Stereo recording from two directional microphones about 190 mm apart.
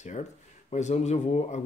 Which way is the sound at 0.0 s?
35° left (ahead or behind).